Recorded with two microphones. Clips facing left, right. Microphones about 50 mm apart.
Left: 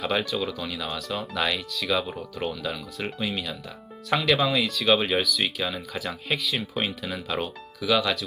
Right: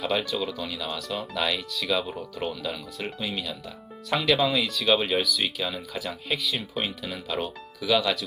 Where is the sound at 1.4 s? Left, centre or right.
Centre.